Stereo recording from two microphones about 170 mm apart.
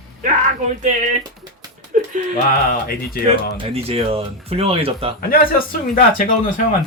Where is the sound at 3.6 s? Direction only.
35° right (ahead or behind).